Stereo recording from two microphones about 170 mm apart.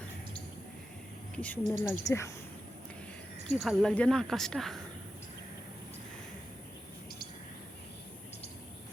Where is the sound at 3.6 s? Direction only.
Centre (ahead or behind).